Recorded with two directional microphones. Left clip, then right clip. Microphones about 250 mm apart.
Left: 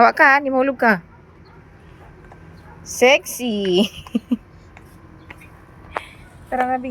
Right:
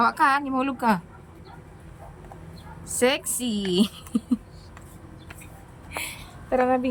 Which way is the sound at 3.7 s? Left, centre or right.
Centre.